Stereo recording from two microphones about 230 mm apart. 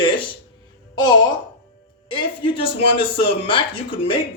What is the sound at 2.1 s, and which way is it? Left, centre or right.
A man's voice, left.